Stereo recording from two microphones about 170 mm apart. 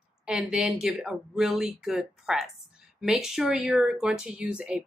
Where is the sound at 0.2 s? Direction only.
5° right (ahead or behind).